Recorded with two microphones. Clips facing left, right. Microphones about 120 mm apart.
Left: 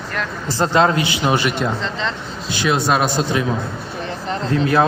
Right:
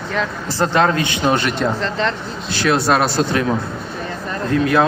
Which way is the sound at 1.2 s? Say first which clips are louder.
Right 2 dB; 5° left (ahead or behind).